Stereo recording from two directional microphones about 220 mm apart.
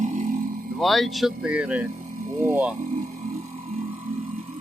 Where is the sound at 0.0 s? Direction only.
35° right (ahead or behind).